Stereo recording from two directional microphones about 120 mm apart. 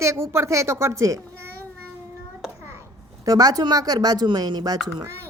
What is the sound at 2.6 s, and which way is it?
A child's voice, 20° right (ahead or behind).